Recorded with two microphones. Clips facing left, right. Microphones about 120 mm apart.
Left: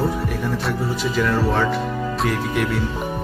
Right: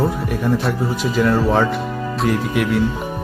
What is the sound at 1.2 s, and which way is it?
Speech, 40° right (ahead or behind).